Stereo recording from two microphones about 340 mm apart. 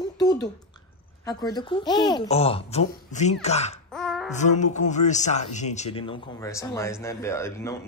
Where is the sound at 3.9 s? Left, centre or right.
Centre.